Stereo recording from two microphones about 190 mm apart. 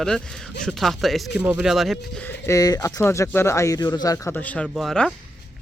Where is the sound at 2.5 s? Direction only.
20° left (ahead or behind).